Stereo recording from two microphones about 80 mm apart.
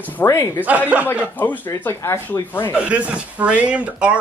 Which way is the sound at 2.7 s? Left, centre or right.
Centre.